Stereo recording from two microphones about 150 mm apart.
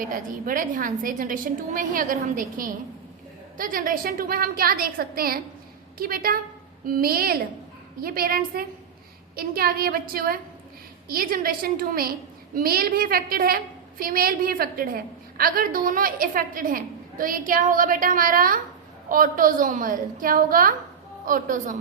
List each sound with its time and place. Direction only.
0.0 s a woman's voice: 65° right (ahead or behind)